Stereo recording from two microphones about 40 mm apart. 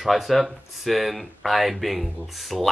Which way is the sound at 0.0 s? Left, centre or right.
Centre.